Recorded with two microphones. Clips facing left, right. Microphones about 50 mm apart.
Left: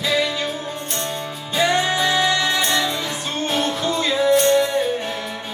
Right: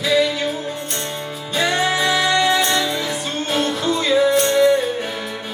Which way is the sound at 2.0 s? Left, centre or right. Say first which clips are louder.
Right 2 dB; centre.